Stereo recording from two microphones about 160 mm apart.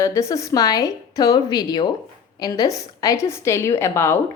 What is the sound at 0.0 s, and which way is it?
A woman's voice, 20° left (ahead or behind).